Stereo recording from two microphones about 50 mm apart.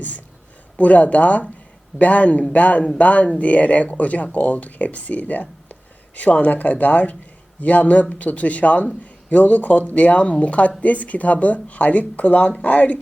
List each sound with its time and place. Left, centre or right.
0.8 s speech: left